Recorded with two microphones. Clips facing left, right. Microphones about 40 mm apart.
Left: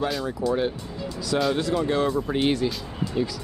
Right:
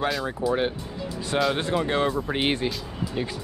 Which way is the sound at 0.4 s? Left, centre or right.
Right.